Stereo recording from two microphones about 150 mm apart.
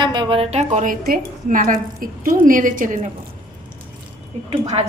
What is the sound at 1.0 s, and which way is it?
A woman's voice, 70° right (ahead or behind).